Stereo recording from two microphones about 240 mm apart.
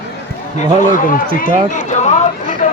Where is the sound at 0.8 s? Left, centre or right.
Left.